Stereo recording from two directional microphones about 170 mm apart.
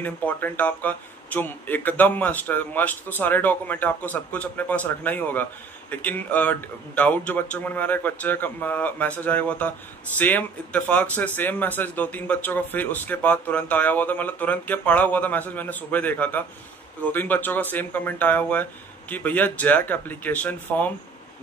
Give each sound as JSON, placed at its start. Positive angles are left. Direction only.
{"t": 0.0, "sound": "speech", "side_deg": 10}